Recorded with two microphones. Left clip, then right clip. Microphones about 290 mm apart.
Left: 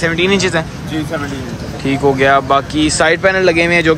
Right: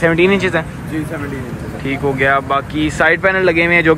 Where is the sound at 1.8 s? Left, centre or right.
Centre.